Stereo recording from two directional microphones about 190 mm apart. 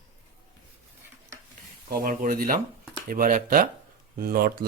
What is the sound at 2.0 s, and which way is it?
Speech, 45° right (ahead or behind).